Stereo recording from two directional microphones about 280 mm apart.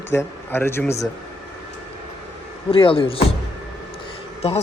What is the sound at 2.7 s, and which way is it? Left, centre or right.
Speech, centre.